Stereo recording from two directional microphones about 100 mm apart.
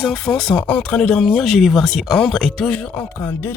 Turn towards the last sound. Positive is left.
turn(degrees=20)  # may be behind; listen again after turning